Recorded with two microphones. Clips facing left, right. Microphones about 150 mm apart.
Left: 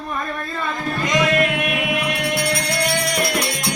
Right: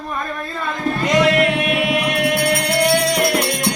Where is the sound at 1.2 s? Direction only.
75° right (ahead or behind); by 3.4 s 55° right (ahead or behind).